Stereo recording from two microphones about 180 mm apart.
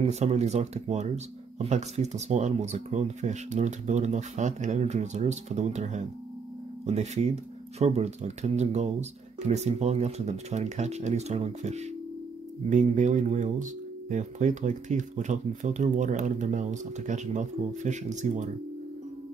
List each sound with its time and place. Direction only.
0.0 s speech: 40° right (ahead or behind)